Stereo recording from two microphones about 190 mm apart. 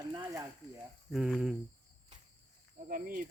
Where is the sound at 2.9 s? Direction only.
45° right (ahead or behind).